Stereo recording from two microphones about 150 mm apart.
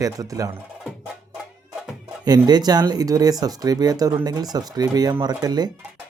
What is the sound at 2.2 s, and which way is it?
Speech, 25° right (ahead or behind).